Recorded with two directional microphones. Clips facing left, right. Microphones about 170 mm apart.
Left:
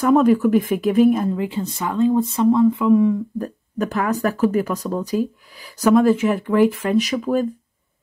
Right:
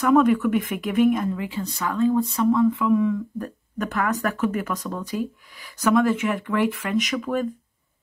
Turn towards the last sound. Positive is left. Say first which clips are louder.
# left 5 dB
turn(degrees=30)  # may be behind; listen again after turning